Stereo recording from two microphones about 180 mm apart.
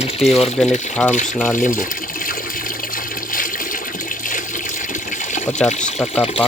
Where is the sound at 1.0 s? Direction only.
Centre (ahead or behind).